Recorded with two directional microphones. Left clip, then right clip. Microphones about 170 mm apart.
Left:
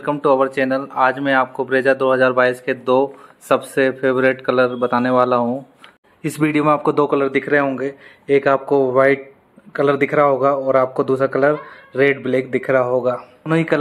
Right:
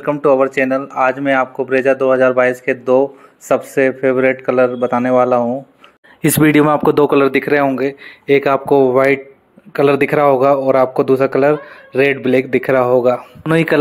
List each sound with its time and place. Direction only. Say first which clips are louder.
0.0 s speech: right 3 dB; 10° right (ahead or behind)
6.2 s speech: right 7 dB; 50° right (ahead or behind)
6.5 s a man's voice: right 1 dB; 30° right (ahead or behind)